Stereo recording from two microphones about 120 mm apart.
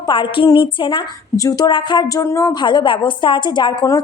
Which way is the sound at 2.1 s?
25° left (ahead or behind).